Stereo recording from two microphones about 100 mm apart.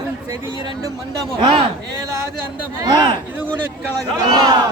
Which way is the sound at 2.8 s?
45° right (ahead or behind).